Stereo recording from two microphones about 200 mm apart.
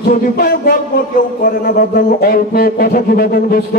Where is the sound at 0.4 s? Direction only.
50° left (ahead or behind).